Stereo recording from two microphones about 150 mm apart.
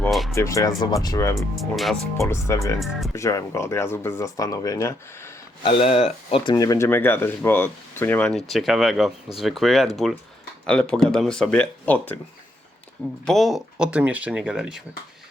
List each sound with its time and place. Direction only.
0.0 s music: centre (ahead or behind)
0.3 s speech: 20° left (ahead or behind)
1.4 s speech: centre (ahead or behind)
2.1 s speech: 20° left (ahead or behind)
5.6 s speech: 40° left (ahead or behind); by 8.4 s 10° left (ahead or behind)
8.4 s speech: centre (ahead or behind)
13.2 s speech: centre (ahead or behind)